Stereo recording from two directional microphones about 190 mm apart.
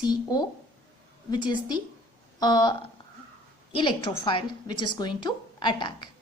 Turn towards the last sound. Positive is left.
turn(degrees=25)  # may be behind; listen again after turning